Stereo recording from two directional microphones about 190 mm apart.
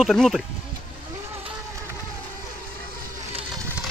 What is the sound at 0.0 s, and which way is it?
Speech, centre (ahead or behind).